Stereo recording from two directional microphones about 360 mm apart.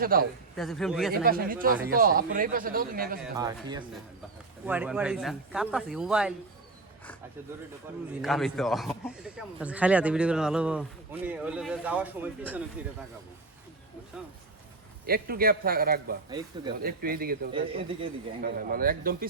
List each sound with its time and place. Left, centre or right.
0.0 s a man's voice: right
0.5 s a man's voice: centre
1.2 s a man's voice: right
3.3 s a man's voice: centre
8.2 s a man's voice: centre
15.0 s a man's voice: right